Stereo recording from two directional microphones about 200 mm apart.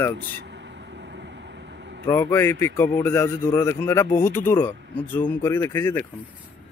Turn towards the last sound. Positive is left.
turn(degrees=10)  # may be behind; listen again after turning